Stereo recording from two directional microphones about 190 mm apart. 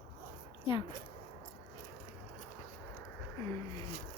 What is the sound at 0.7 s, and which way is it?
Speech, 25° left (ahead or behind).